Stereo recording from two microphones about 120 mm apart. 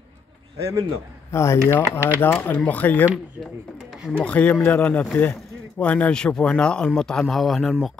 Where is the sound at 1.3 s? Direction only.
25° left (ahead or behind).